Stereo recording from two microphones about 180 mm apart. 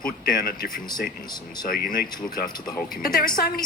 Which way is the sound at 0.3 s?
55° left (ahead or behind).